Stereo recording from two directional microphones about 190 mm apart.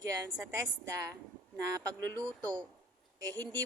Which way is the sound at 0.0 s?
20° right (ahead or behind).